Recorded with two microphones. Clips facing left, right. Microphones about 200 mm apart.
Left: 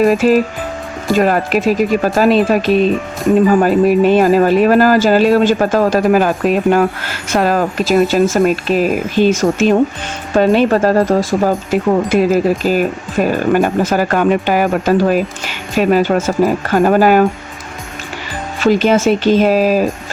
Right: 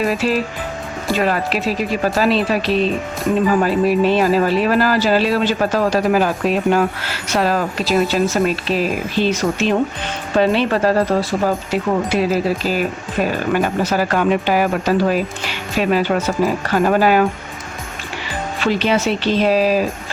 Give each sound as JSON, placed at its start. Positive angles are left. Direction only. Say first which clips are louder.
{"t": 0.0, "sound": "speech", "louder": "left 7 dB", "side_deg": 50}
{"t": 18.6, "sound": "speech", "louder": "left 6 dB", "side_deg": 45}